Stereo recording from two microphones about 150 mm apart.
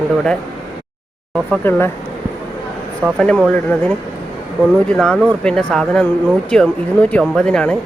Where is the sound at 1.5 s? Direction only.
15° left (ahead or behind).